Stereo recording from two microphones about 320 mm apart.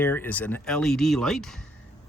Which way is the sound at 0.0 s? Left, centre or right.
Centre.